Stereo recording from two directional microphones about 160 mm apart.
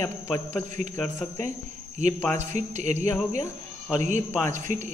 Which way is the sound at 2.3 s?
45° right (ahead or behind).